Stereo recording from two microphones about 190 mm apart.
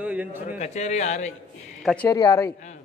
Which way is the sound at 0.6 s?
35° left (ahead or behind).